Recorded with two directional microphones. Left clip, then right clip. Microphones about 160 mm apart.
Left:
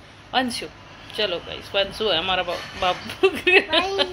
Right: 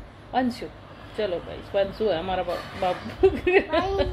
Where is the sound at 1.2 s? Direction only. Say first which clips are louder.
Left 3 dB; centre (ahead or behind).